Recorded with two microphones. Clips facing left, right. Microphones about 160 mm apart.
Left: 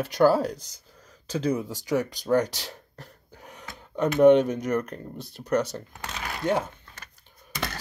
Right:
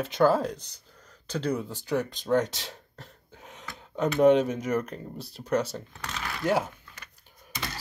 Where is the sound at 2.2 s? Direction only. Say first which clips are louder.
Left 2 dB; centre (ahead or behind).